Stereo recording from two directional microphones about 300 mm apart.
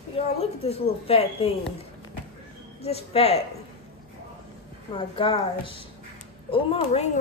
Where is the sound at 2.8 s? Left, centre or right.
Centre.